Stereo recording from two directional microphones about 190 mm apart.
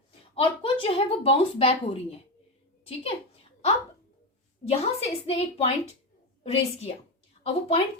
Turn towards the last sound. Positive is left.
turn(degrees=30)  # may be behind; listen again after turning